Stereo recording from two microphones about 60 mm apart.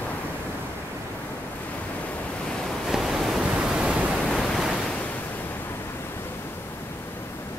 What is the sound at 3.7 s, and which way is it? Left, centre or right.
Pink noise, centre.